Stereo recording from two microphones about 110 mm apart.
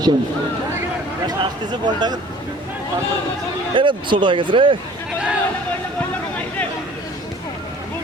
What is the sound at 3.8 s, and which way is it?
Speech, 50° right (ahead or behind).